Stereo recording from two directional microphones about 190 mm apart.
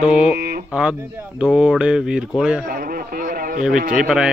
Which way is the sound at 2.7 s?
50° right (ahead or behind).